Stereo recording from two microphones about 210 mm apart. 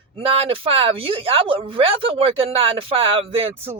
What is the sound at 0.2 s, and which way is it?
Speech, 25° right (ahead or behind).